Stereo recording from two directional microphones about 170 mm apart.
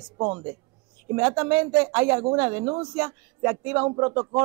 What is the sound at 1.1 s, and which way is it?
Speech, 10° right (ahead or behind).